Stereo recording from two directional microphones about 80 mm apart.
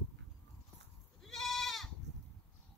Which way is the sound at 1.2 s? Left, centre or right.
Centre.